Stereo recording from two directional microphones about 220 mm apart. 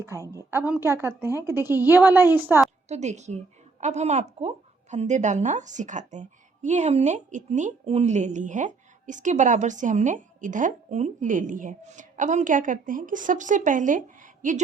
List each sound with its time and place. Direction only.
0.0 s a woman's voice: 15° right (ahead or behind)
2.9 s a woman's voice: 30° right (ahead or behind)